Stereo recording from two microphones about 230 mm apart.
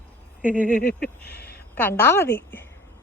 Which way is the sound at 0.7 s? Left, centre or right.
Left.